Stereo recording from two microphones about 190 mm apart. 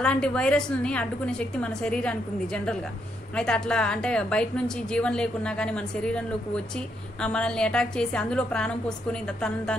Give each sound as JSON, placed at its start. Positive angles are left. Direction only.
{"t": 0.0, "sound": "a woman's voice", "side_deg": 5}